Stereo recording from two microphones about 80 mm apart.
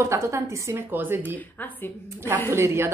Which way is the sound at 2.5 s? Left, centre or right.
Right.